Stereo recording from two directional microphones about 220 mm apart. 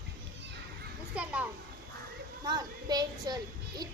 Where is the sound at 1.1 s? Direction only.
5° right (ahead or behind).